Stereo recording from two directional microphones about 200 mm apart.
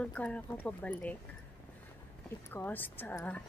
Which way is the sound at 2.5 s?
10° left (ahead or behind).